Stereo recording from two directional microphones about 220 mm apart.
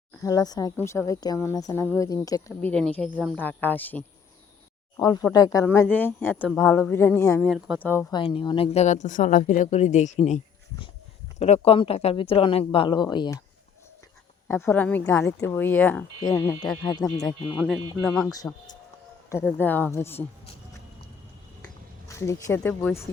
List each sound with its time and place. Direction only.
0.2 s speech: 15° left (ahead or behind)
8.1 s speech: 20° left (ahead or behind)
14.4 s speech: 10° left (ahead or behind)
17.5 s speech: 5° right (ahead or behind)
18.1 s speech: 5° left (ahead or behind)
22.0 s speech: 15° left (ahead or behind)